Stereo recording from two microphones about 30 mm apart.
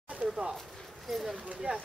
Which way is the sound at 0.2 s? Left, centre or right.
Right.